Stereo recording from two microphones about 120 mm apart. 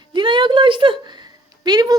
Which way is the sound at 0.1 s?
40° right (ahead or behind).